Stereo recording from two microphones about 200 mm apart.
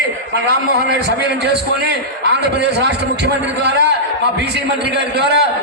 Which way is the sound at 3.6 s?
55° right (ahead or behind).